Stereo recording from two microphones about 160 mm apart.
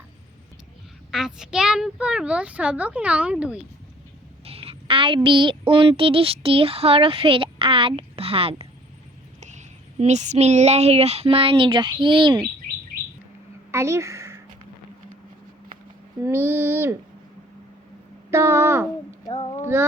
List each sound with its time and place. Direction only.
1.1 s a child's voice: 5° right (ahead or behind)
4.4 s a woman's voice: 35° right (ahead or behind)
9.4 s speech: 50° right (ahead or behind); by 12.5 s 30° right (ahead or behind)
13.7 s a sound: 15° right (ahead or behind)
16.2 s a child's voice: 15° right (ahead or behind)
18.3 s a child's voice: 15° right (ahead or behind)
19.3 s a child's voice: 30° left (ahead or behind)